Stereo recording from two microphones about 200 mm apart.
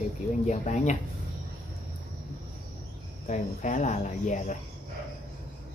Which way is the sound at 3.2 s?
35° left (ahead or behind).